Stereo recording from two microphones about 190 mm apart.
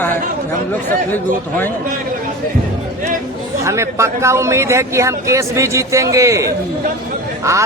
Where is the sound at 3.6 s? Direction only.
15° right (ahead or behind).